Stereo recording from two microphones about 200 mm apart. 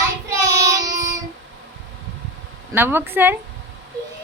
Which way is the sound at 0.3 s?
15° right (ahead or behind).